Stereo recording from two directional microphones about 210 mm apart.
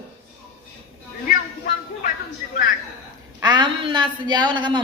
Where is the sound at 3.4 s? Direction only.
20° right (ahead or behind).